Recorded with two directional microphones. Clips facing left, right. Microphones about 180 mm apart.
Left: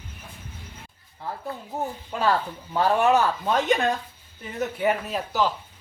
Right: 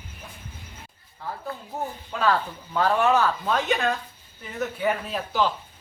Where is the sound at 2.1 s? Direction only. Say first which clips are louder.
Even; 15° left (ahead or behind).